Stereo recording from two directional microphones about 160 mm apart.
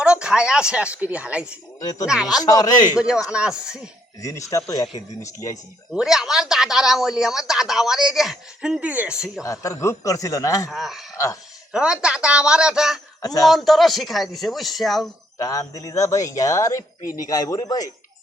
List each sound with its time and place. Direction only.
0.0 s a woman's voice: 5° right (ahead or behind)
1.8 s speech: 25° left (ahead or behind)
2.0 s speech: 5° right (ahead or behind)
2.4 s speech: 25° left (ahead or behind)
3.0 s speech: 5° right (ahead or behind)
4.2 s speech: 20° left (ahead or behind)
5.9 s speech: centre (ahead or behind)
9.4 s speech: 20° left (ahead or behind)
10.7 s speech: centre (ahead or behind)
13.2 s speech: 20° left (ahead or behind)
13.5 s speech: centre (ahead or behind)
15.4 s speech: 20° left (ahead or behind)
17.0 s speech: 60° left (ahead or behind)
17.2 s speech: 25° left (ahead or behind)